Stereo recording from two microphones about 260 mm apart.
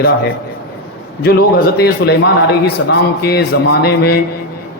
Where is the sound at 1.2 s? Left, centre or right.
Left.